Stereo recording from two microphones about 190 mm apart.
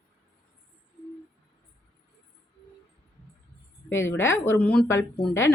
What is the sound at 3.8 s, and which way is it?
Speech, 10° left (ahead or behind).